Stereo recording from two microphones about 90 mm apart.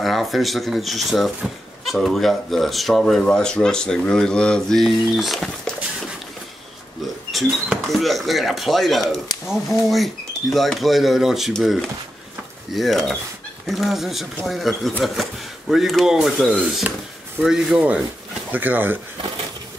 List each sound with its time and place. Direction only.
0.0 s speech: centre (ahead or behind)
7.3 s rodents: centre (ahead or behind)
7.9 s speech: centre (ahead or behind)
12.7 s speech: centre (ahead or behind)
18.5 s speech: 20° right (ahead or behind)